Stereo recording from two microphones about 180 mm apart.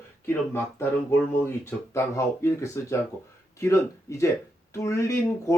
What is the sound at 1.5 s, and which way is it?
Speech, 15° left (ahead or behind).